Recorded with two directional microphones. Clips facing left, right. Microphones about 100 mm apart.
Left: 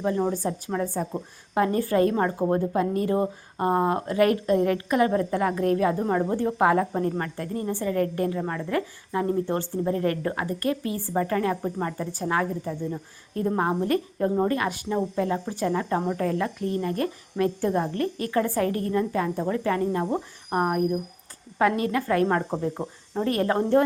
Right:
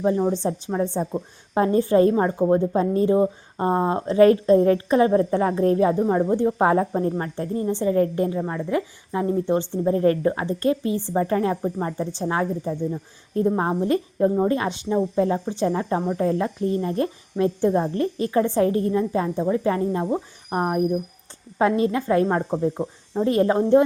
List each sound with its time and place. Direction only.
0.3 s a woman's voice: 25° right (ahead or behind)
6.0 s speech: 10° right (ahead or behind)
6.3 s a woman's voice: 25° right (ahead or behind)